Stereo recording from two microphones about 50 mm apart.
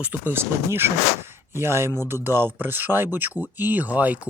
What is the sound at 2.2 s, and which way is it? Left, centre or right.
Speech, right.